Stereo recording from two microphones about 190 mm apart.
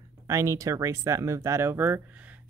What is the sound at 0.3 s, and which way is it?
Speech, 15° right (ahead or behind).